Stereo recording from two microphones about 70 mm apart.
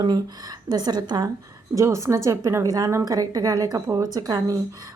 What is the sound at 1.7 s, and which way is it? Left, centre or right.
Speech, right.